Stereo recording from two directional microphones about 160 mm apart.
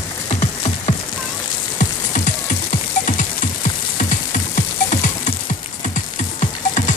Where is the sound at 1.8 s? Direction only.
50° left (ahead or behind).